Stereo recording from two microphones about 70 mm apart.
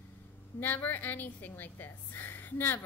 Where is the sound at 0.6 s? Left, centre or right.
Left.